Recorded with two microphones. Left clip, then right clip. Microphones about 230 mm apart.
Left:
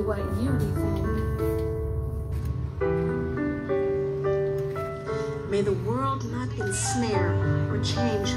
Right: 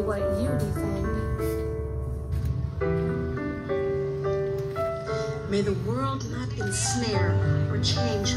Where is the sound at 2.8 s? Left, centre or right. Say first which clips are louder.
Left 2 dB; left.